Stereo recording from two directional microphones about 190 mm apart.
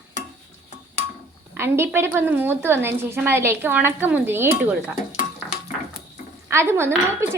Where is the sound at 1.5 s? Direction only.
15° right (ahead or behind).